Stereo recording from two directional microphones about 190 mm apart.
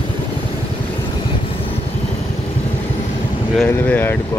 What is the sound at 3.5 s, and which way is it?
Boat, 10° left (ahead or behind).